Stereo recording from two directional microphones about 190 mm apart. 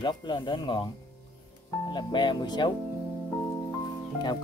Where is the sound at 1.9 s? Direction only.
25° left (ahead or behind).